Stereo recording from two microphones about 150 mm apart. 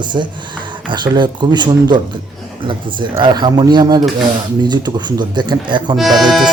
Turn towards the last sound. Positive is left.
turn(degrees=0)  # may be behind; listen again after turning